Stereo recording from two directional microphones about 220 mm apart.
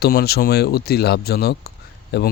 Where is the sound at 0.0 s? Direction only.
45° left (ahead or behind).